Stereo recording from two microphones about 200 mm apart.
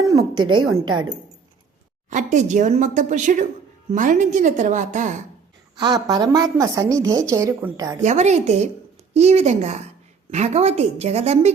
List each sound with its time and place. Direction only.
0.3 s a woman's voice: 90° right
2.0 s a woman's voice: 40° right (ahead or behind)
5.7 s a woman's voice: 20° right (ahead or behind)
8.0 s a woman's voice: 35° right (ahead or behind)